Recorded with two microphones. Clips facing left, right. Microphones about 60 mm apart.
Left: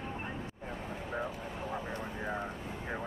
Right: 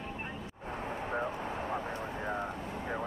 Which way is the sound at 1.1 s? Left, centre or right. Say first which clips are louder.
Right 2 dB; right.